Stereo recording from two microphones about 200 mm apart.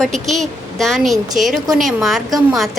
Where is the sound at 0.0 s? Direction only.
Centre (ahead or behind).